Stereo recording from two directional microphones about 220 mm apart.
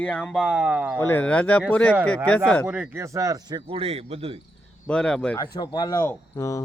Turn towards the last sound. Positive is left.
turn(degrees=15)  # may be behind; listen again after turning